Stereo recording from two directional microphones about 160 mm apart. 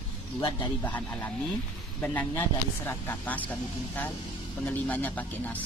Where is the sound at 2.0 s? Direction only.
10° left (ahead or behind).